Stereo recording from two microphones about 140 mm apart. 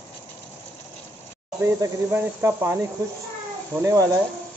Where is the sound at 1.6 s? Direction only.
20° right (ahead or behind).